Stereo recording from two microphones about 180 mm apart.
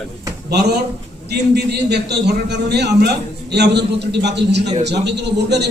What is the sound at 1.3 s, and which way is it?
A man's voice, 65° right (ahead or behind).